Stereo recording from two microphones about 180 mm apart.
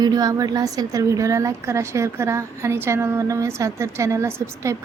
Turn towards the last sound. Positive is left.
turn(degrees=-15)  # may be behind; listen again after turning